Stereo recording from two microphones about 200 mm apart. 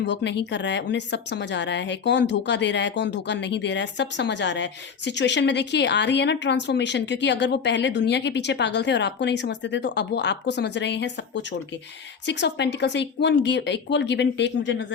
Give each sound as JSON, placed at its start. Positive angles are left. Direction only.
{"t": 0.0, "sound": "speech", "side_deg": 60}